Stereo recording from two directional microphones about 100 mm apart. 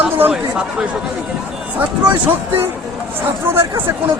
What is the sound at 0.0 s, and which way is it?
Chatter, 15° right (ahead or behind).